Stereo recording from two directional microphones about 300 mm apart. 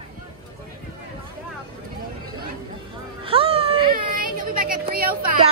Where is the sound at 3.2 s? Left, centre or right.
Centre.